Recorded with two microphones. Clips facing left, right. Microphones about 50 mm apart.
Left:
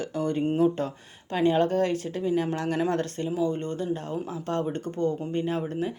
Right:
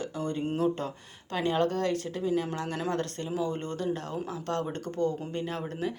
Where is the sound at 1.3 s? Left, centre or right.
Left.